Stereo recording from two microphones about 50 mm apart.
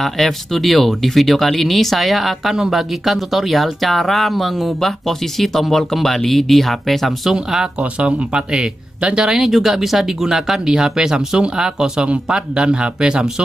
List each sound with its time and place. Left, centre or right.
0.0 s speech: centre
7.3 s speech: centre
7.8 s speech: right